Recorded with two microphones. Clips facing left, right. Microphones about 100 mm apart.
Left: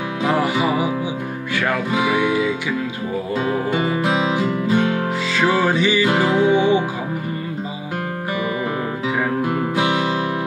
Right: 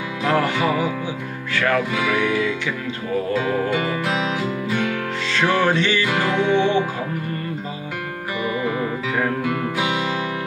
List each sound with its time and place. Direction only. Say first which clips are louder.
0.2 s music: left 1 dB; 10° left (ahead or behind)
3.7 s music: left 3 dB; 30° left (ahead or behind)
5.3 s music: even; 5° left (ahead or behind)
6.0 s music: left 4 dB; 30° left (ahead or behind)
6.4 s music: left 2 dB; 10° left (ahead or behind)
9.4 s music: left 3 dB; 30° left (ahead or behind)